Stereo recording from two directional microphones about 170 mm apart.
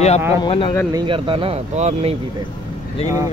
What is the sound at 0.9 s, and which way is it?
Speech, 30° right (ahead or behind).